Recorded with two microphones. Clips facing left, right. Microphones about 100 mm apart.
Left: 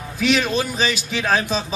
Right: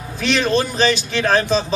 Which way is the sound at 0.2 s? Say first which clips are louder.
Right 2 dB; 5° left (ahead or behind).